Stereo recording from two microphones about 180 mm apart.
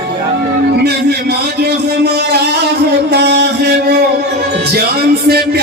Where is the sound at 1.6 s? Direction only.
65° right (ahead or behind).